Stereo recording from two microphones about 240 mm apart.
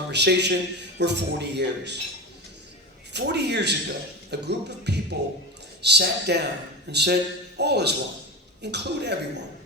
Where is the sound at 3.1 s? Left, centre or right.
Right.